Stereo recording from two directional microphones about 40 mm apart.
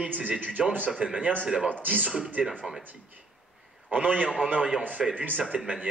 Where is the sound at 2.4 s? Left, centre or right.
Right.